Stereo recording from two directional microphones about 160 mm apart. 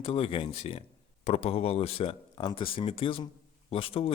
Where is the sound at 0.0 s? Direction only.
35° left (ahead or behind).